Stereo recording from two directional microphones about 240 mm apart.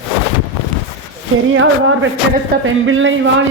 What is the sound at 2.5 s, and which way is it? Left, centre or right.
Speech, right.